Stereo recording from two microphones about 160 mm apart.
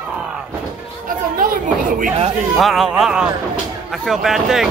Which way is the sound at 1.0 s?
60° right (ahead or behind).